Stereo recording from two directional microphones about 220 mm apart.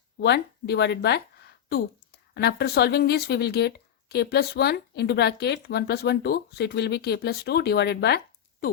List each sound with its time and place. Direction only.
0.2 s speech: 50° left (ahead or behind)